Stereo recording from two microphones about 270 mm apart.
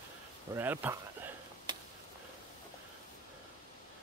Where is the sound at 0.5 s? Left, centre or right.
Centre.